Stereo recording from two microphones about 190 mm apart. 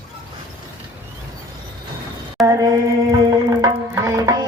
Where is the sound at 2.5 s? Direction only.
20° right (ahead or behind).